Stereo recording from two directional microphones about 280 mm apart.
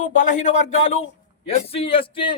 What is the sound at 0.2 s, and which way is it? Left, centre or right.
A man's voice, left.